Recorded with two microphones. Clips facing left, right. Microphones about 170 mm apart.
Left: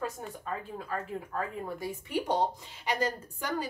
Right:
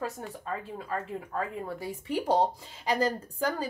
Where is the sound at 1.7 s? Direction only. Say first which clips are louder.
Right 1 dB; 30° right (ahead or behind).